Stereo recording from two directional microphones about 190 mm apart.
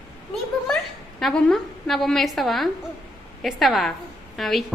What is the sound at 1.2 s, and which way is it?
A woman's voice, centre (ahead or behind).